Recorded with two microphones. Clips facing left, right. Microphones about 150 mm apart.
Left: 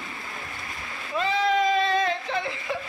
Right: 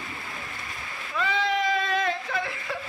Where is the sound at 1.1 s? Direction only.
30° left (ahead or behind).